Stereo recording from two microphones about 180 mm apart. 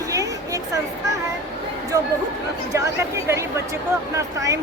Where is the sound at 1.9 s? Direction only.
20° right (ahead or behind).